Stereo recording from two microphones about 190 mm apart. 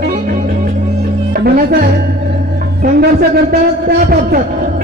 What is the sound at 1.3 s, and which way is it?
Music, 50° right (ahead or behind).